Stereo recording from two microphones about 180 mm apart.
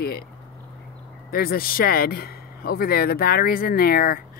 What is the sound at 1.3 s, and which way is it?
A man's voice, 55° left (ahead or behind).